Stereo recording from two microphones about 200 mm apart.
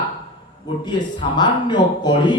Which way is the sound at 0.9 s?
20° left (ahead or behind).